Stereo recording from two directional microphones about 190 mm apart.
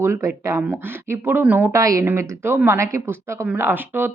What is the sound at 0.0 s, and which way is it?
Speech, 15° right (ahead or behind).